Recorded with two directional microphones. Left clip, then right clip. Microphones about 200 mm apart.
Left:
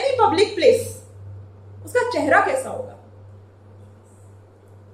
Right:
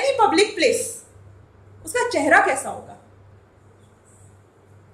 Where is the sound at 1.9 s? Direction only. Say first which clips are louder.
Even; 50° right (ahead or behind).